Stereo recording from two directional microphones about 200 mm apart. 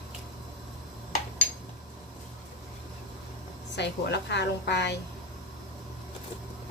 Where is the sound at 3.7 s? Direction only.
60° left (ahead or behind).